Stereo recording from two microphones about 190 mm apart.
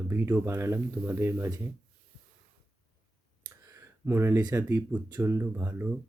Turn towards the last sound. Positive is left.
turn(degrees=-10)  # may be behind; listen again after turning